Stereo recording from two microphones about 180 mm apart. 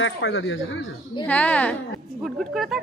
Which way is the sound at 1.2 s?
10° left (ahead or behind).